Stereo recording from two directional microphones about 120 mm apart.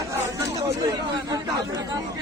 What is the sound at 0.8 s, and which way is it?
Speech, 35° right (ahead or behind).